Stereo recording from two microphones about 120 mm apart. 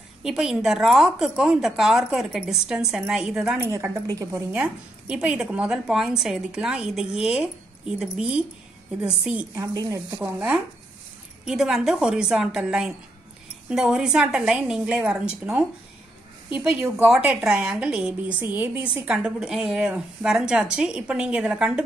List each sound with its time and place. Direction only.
0.2 s a woman's voice: 5° right (ahead or behind)
3.5 s a woman's voice: 20° right (ahead or behind)
4.5 s a woman's voice: 10° right (ahead or behind)
9.6 s a woman's voice: 25° right (ahead or behind)
10.2 s a woman's voice: 10° right (ahead or behind)
16.9 s a woman's voice: 10° right (ahead or behind)